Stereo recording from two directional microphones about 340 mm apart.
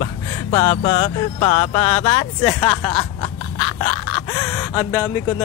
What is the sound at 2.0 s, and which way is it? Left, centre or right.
Speech, centre.